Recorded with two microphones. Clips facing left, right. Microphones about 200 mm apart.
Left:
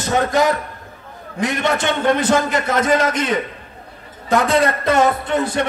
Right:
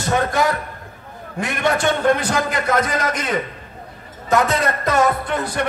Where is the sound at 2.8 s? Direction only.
30° left (ahead or behind).